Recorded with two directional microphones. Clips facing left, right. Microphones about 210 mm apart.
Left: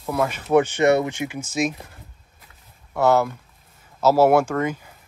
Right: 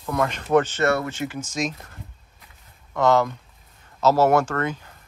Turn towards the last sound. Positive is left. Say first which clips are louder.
# left 2 dB
turn(degrees=10)  # may be behind; listen again after turning